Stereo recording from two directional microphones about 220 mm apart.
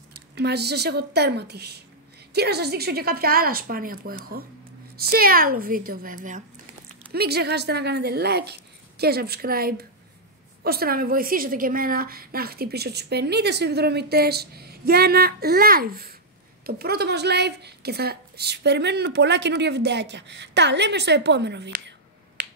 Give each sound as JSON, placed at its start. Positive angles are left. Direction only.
{"t": 0.4, "sound": "a woman's voice", "side_deg": -50}
{"t": 22.4, "sound": "finger snapping", "side_deg": -50}